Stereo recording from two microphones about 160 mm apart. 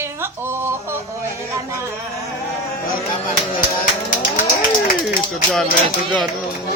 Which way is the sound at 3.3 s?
55° left (ahead or behind).